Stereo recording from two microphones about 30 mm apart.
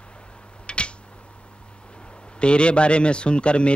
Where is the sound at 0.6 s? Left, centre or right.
Left.